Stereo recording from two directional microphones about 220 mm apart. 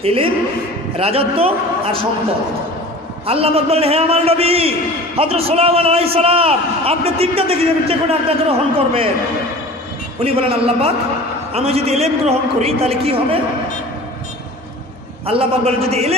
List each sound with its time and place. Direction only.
0.0 s a man's voice: 25° right (ahead or behind)
3.3 s a man's voice: 25° right (ahead or behind)
10.2 s a man's voice: 25° right (ahead or behind)
15.2 s a man's voice: 25° right (ahead or behind)